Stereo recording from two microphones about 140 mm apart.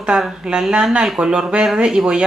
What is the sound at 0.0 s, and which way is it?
Speech, 5° right (ahead or behind).